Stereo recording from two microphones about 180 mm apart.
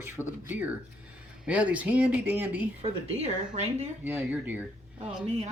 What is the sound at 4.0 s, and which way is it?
Speech, 10° right (ahead or behind).